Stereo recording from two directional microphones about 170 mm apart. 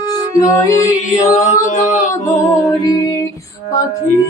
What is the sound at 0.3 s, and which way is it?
Music, 20° left (ahead or behind).